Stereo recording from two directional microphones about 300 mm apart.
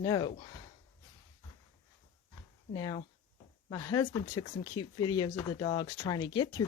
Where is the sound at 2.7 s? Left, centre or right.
Centre.